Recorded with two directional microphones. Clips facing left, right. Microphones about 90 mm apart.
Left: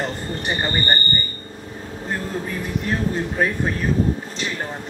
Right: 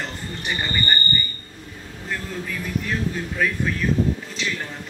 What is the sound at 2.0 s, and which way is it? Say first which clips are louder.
Speech: left 3 dB; 35° left (ahead or behind).